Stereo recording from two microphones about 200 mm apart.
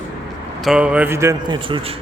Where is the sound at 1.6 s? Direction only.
25° right (ahead or behind).